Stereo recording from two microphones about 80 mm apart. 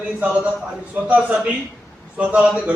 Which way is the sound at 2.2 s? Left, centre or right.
Centre.